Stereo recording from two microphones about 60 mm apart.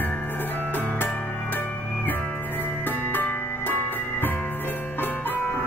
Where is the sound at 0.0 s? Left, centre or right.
Left.